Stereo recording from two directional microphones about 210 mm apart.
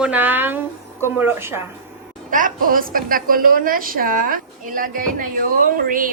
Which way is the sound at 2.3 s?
40° right (ahead or behind).